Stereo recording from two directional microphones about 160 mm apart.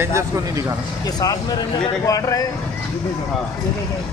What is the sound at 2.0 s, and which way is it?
Speech, 20° left (ahead or behind).